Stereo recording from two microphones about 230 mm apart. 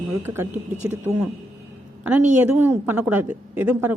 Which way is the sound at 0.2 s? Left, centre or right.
Centre.